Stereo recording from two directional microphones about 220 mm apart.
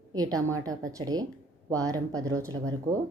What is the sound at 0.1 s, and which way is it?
A woman's voice, 15° right (ahead or behind).